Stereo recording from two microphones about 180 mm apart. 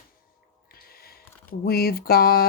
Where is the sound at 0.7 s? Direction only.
55° left (ahead or behind).